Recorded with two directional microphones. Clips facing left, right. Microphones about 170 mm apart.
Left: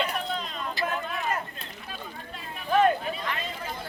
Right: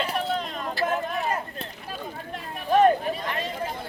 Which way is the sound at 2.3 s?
40° right (ahead or behind).